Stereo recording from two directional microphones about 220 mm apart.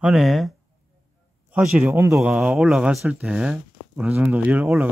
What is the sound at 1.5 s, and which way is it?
Speech, 5° right (ahead or behind).